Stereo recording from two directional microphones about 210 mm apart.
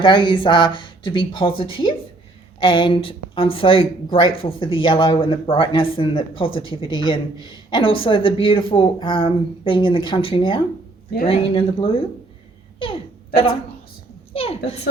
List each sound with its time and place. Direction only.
0.0 s speech: 25° left (ahead or behind)
12.8 s a sound: 25° left (ahead or behind)
14.3 s speech: 25° left (ahead or behind)